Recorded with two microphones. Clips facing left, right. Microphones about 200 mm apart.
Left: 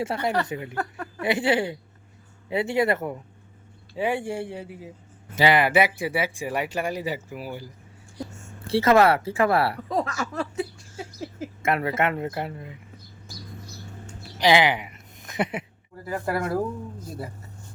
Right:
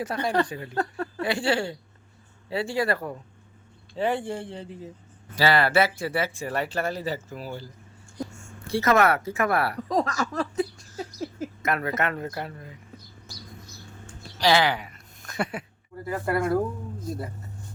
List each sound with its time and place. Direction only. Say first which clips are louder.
0.0 s speech: even; 25° left (ahead or behind)
3.9 s speech: left 1 dB; 10° left (ahead or behind)
8.6 s speech: left 3 dB; 30° left (ahead or behind)
10.0 s chuckle: right 1 dB; 40° right (ahead or behind)
11.6 s speech: left 3 dB; 25° left (ahead or behind)
14.1 s a sound: left 2 dB; 20° left (ahead or behind)
16.0 s speech: right 2 dB; centre (ahead or behind)